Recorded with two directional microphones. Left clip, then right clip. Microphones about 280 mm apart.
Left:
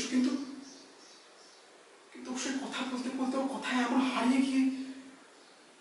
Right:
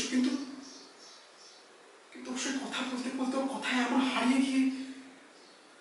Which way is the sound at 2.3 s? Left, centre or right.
Centre.